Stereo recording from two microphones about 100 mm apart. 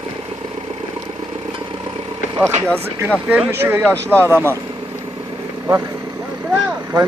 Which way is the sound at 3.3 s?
20° right (ahead or behind).